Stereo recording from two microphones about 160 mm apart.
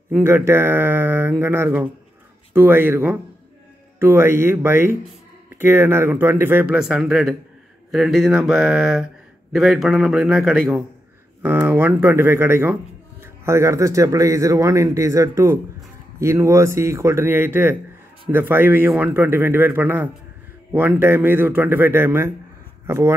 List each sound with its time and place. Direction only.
0.1 s a man's voice: 15° right (ahead or behind)